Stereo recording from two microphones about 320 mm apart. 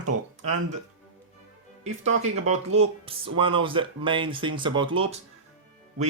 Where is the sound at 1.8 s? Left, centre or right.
Right.